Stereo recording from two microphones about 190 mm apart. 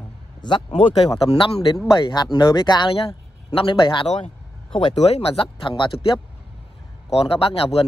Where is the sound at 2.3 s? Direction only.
20° left (ahead or behind).